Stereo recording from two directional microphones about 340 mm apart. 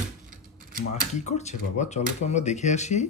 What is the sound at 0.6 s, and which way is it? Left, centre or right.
Mechanisms, right.